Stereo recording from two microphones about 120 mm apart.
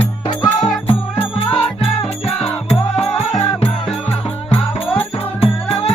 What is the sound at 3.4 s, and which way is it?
Music, 60° left (ahead or behind).